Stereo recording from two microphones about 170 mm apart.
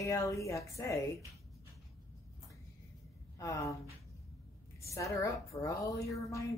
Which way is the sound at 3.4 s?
20° left (ahead or behind).